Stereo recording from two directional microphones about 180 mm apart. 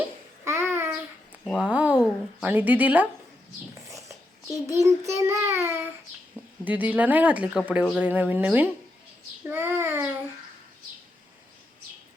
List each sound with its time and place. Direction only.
0.0 s babbling: 15° right (ahead or behind)
1.6 s a sound: 10° right (ahead or behind)
4.6 s child singing: 15° right (ahead or behind)
9.4 s a child's voice: 10° right (ahead or behind)